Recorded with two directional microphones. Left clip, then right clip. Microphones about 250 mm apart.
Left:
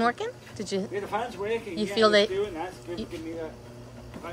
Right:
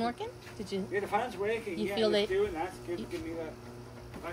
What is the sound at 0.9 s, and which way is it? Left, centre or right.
Speech, centre.